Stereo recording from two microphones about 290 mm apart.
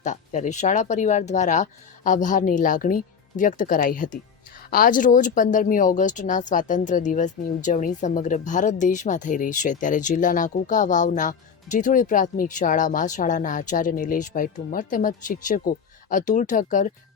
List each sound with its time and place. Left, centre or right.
0.0 s speech: left